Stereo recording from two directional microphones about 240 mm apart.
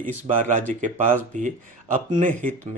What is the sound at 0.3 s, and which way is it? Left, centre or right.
Speech, right.